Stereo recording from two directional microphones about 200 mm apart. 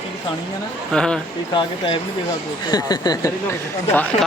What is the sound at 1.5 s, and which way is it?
Speech, 25° left (ahead or behind).